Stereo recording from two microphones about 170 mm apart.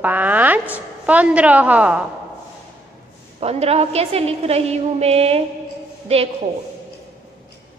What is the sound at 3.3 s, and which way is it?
A woman's voice, 35° right (ahead or behind).